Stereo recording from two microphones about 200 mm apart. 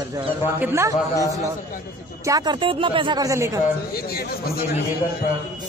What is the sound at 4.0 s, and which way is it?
Speech, 50° left (ahead or behind).